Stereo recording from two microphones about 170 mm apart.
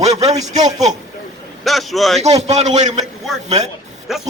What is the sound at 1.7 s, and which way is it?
Speech, centre (ahead or behind).